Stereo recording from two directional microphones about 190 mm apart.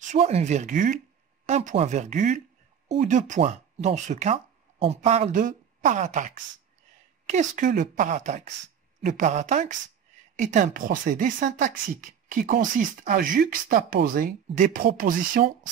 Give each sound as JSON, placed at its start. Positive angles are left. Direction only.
{"t": 0.0, "sound": "a woman's voice", "side_deg": -40}